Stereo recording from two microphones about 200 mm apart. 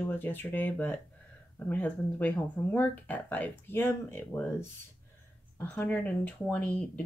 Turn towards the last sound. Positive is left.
turn(degrees=5)  # may be behind; listen again after turning